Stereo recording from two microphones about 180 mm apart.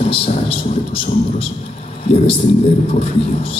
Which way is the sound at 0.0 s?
35° left (ahead or behind).